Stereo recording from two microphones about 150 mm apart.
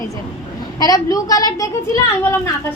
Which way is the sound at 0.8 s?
25° left (ahead or behind).